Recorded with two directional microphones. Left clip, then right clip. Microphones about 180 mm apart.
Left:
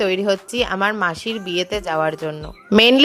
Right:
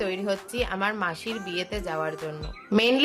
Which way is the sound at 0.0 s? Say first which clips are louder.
Left 9 dB; 45° left (ahead or behind).